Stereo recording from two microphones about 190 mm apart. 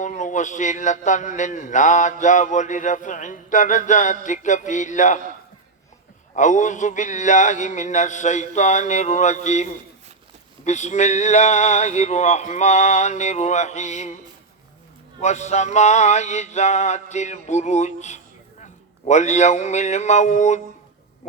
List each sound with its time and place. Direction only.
0.0 s speech: 40° left (ahead or behind)
6.3 s speech: 40° left (ahead or behind)
15.2 s a man's voice: 35° left (ahead or behind)